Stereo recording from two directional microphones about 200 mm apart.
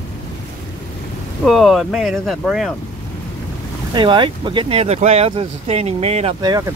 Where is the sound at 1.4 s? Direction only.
Centre (ahead or behind).